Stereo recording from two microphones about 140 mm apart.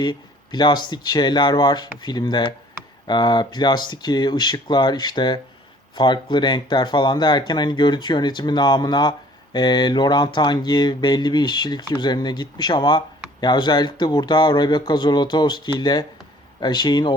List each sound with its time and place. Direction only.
0.0 s speech: 30° left (ahead or behind)